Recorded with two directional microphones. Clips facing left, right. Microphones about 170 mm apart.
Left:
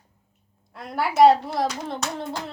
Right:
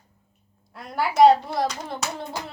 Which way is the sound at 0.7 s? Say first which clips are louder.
Even; centre (ahead or behind).